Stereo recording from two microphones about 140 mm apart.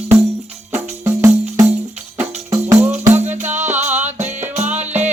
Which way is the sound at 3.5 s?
60° right (ahead or behind).